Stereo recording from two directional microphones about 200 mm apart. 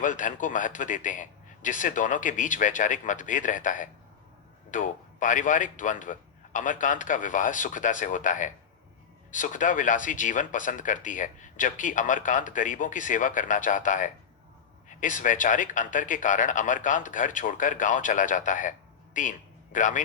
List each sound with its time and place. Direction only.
0.0 s a man's voice: 40° left (ahead or behind)